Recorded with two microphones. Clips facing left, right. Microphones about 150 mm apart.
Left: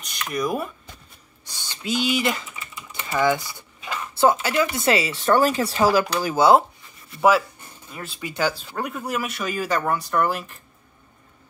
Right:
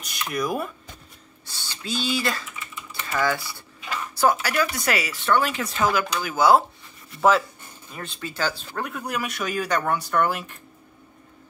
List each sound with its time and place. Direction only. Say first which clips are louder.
0.0 s speech: left 1 dB; 5° right (ahead or behind)
1.4 s speech: left 3 dB; 15° left (ahead or behind)
5.2 s speech: left 4 dB; 40° left (ahead or behind)
7.2 s speech: left 1 dB; 10° left (ahead or behind)